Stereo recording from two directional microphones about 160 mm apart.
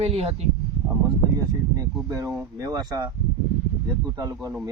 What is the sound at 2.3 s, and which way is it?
Speech, 15° right (ahead or behind).